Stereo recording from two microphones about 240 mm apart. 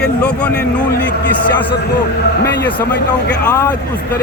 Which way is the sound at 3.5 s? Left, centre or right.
Centre.